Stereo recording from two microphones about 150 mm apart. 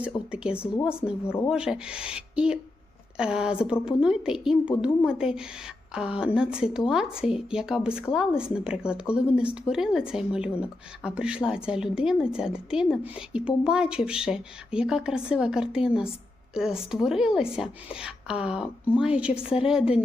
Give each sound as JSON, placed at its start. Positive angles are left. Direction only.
{"t": 0.0, "sound": "speech", "side_deg": -5}
{"t": 1.2, "sound": "speech", "side_deg": 15}
{"t": 1.5, "sound": "speech", "side_deg": -5}